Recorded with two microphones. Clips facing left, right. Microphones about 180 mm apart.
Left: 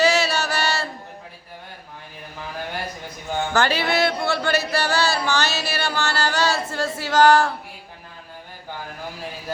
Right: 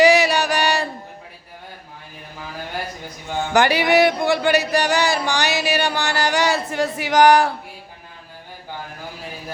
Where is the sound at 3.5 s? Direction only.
15° right (ahead or behind).